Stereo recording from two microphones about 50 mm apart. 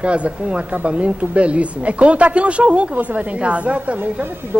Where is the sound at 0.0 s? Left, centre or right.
Right.